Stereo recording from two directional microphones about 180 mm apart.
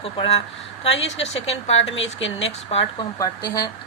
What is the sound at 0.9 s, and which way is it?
Speech, 90° left.